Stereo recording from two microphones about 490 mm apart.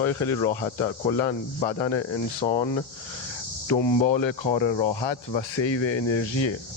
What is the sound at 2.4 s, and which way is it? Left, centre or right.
Speech, centre.